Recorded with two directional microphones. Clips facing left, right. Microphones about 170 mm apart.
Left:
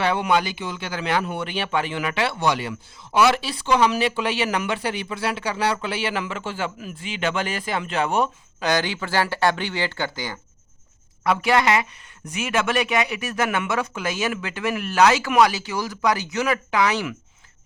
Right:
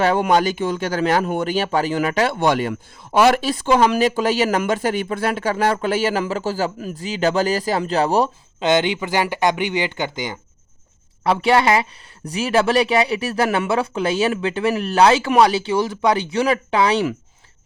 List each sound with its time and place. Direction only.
0.0 s speech: 45° right (ahead or behind)
8.6 s speech: 20° right (ahead or behind)